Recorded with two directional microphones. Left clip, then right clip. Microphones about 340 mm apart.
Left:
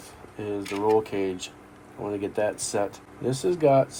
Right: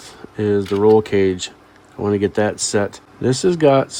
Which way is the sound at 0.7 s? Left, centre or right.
Right.